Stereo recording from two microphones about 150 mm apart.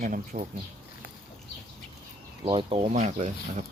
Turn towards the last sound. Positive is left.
turn(degrees=-55)  # may be behind; listen again after turning